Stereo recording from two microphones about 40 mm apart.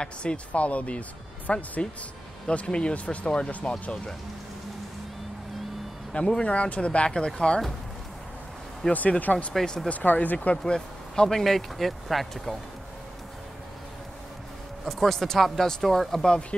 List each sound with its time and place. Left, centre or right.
0.0 s speech: left
6.1 s speech: left
6.4 s speech: left
7.1 s speech: centre
8.8 s speech: centre
9.2 s speech: left
10.5 s speech: centre
11.2 s speech: centre
14.9 s speech: centre
16.3 s speech: left